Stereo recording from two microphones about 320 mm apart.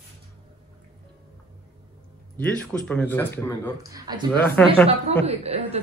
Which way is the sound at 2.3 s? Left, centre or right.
Centre.